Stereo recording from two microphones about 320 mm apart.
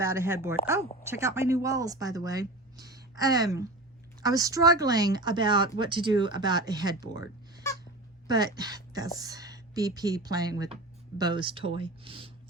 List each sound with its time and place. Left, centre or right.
0.0 s speech: centre
8.5 s speech: centre